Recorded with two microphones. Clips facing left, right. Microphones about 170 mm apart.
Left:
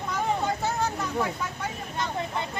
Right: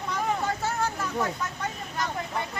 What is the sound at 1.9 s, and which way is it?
Speech, 25° left (ahead or behind).